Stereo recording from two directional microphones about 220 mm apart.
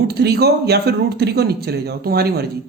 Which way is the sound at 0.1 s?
45° right (ahead or behind).